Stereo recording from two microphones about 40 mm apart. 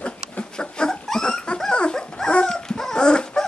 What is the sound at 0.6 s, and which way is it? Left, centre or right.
Dog, left.